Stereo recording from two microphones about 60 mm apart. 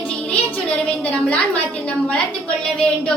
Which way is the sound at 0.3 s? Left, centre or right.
Centre.